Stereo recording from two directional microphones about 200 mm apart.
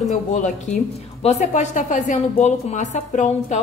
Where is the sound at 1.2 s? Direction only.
35° left (ahead or behind).